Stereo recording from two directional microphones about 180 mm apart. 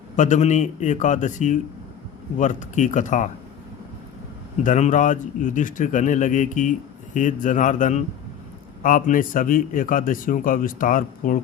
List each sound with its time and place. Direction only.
0.2 s speech: 40° left (ahead or behind)
4.6 s speech: 45° left (ahead or behind)